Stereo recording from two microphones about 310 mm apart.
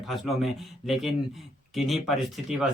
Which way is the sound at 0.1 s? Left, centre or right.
Centre.